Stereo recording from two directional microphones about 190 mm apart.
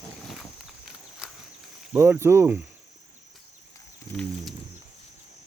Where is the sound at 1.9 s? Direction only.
10° right (ahead or behind).